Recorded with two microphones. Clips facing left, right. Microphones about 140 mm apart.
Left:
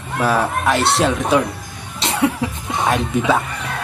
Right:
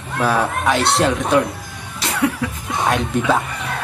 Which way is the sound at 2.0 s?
25° left (ahead or behind).